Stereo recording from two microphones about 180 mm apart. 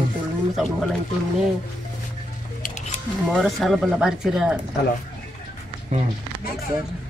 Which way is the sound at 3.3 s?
Centre (ahead or behind).